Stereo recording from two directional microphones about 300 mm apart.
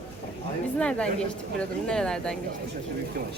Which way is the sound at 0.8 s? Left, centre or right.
Centre.